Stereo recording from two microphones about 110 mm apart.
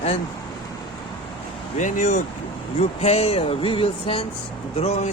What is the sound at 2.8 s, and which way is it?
Speech, 70° left (ahead or behind).